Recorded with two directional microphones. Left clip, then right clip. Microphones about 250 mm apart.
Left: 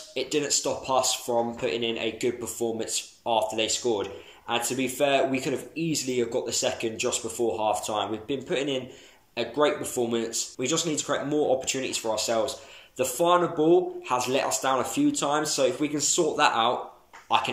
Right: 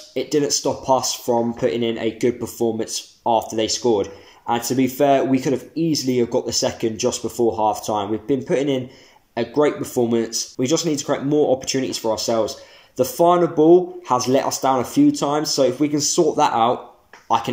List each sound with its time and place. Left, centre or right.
0.2 s speech: right